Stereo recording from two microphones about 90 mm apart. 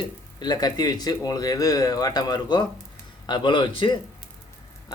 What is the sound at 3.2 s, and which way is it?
Speech, 60° left (ahead or behind).